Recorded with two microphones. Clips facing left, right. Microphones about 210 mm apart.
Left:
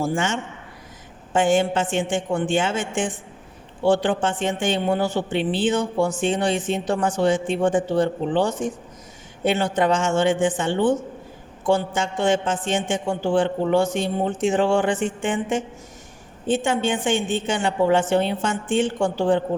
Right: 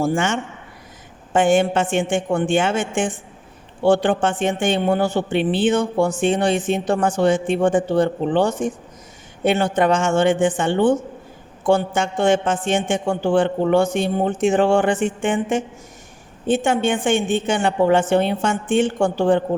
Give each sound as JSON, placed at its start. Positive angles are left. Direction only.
{"t": 0.0, "sound": "a man's voice", "side_deg": -60}